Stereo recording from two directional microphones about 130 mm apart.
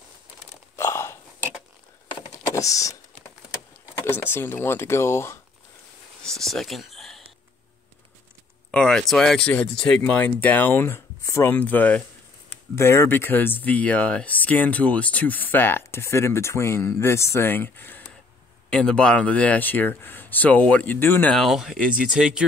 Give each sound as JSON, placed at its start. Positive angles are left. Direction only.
{"t": 0.7, "sound": "hiccup", "side_deg": 20}
{"t": 2.5, "sound": "a sound", "side_deg": 25}
{"t": 4.0, "sound": "speech", "side_deg": 15}
{"t": 6.2, "sound": "speech", "side_deg": 5}
{"t": 8.7, "sound": "speech", "side_deg": 5}
{"t": 21.4, "sound": "speech", "side_deg": -5}